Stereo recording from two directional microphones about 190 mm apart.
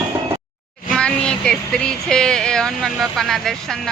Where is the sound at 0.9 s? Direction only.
5° left (ahead or behind).